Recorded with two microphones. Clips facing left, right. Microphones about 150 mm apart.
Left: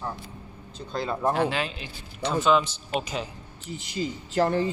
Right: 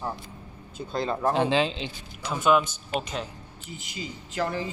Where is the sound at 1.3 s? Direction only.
25° right (ahead or behind).